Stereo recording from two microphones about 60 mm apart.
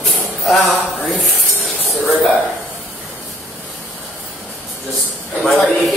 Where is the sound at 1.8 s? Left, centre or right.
Centre.